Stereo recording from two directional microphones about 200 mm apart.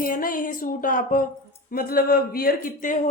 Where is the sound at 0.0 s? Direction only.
45° left (ahead or behind).